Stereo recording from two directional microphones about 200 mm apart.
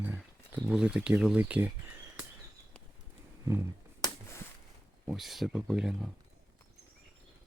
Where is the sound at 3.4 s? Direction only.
15° right (ahead or behind).